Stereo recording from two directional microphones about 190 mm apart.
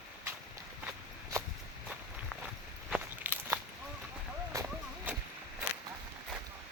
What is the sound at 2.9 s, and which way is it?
Crunch, 10° right (ahead or behind).